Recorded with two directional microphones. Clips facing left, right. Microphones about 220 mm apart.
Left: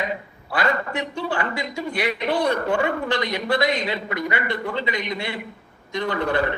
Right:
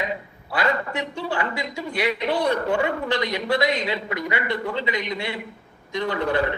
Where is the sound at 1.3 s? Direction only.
50° left (ahead or behind).